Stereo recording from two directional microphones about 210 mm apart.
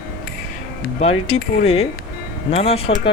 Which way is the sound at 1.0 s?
30° left (ahead or behind).